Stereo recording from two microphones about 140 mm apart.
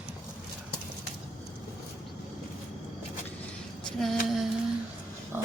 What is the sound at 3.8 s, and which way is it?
Female singing, centre (ahead or behind).